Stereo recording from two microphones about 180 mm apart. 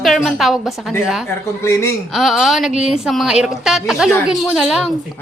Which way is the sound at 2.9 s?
Centre (ahead or behind).